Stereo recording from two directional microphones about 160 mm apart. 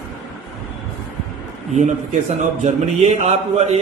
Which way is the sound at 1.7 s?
45° right (ahead or behind).